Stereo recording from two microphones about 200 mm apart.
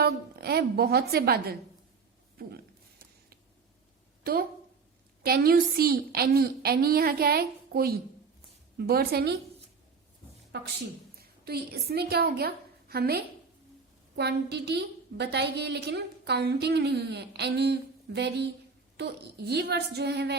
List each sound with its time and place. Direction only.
0.0 s a woman's voice: 55° right (ahead or behind)
4.2 s a woman's voice: 50° right (ahead or behind)
11.2 s a woman's voice: 50° right (ahead or behind)